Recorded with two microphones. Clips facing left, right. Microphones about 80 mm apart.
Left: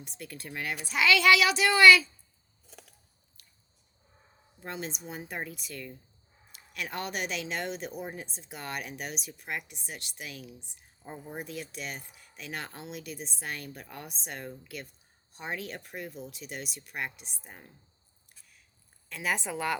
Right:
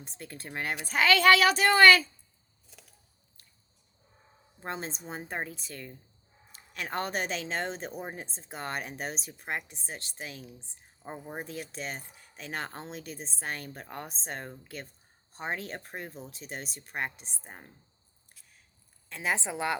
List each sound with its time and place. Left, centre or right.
0.0 s a woman's voice: right
4.6 s a woman's voice: right
19.0 s a woman's voice: right